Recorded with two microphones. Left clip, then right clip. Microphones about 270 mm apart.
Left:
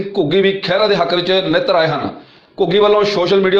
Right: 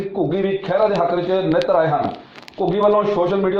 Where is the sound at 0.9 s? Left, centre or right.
Left.